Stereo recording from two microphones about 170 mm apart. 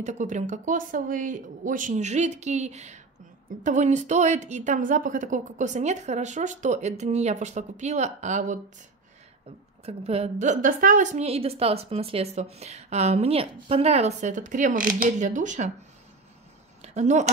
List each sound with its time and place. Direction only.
0.0 s a woman's voice: 45° right (ahead or behind)
9.8 s a woman's voice: 35° right (ahead or behind)
16.8 s speech: 45° right (ahead or behind)